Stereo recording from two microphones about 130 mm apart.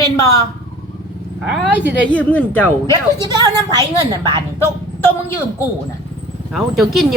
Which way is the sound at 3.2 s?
30° right (ahead or behind).